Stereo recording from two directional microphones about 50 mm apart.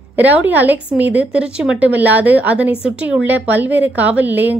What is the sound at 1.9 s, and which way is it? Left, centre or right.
A woman's voice, right.